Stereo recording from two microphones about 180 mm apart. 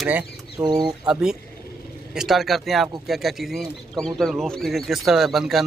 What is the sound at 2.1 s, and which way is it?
Speech, centre (ahead or behind).